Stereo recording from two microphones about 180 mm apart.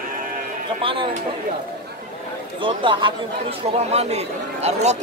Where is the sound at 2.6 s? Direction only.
25° right (ahead or behind).